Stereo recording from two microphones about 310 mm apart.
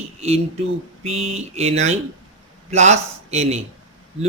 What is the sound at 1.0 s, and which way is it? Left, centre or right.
A man's voice, centre.